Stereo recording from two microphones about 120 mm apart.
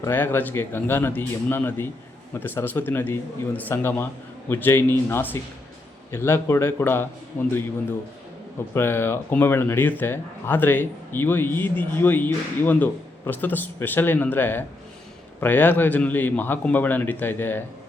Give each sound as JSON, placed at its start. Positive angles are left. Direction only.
{"t": 0.1, "sound": "a man's voice", "side_deg": 15}
{"t": 8.7, "sound": "a man's voice", "side_deg": 20}